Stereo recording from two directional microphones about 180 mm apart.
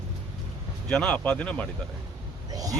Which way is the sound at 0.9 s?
5° left (ahead or behind).